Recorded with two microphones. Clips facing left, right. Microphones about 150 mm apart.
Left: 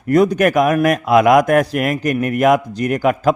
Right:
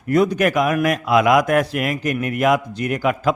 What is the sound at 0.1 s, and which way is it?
A man's voice, 45° left (ahead or behind).